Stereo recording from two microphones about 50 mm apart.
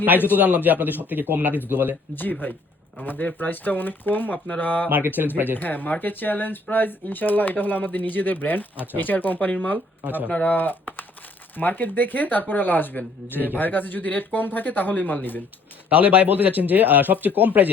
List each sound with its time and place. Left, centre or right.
0.3 s speech: right
2.4 s speech: left
15.9 s speech: right